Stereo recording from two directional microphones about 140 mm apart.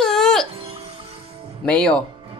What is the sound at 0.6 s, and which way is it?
Music, 40° right (ahead or behind).